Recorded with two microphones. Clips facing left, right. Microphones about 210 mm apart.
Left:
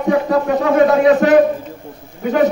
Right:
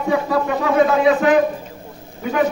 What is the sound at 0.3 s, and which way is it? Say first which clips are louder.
A man's voice: left 4 dB; 40° left (ahead or behind).